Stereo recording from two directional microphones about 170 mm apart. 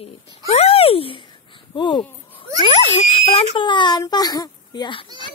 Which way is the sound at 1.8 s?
25° left (ahead or behind).